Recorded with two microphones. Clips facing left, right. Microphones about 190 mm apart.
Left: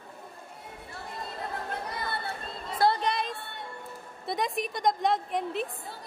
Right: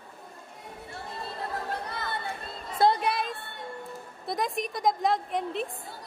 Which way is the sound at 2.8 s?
10° right (ahead or behind).